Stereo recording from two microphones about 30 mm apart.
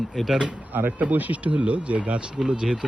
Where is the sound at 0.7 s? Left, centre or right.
Right.